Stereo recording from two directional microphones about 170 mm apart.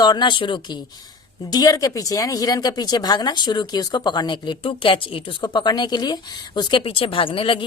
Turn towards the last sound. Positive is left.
turn(degrees=30)  # may be behind; listen again after turning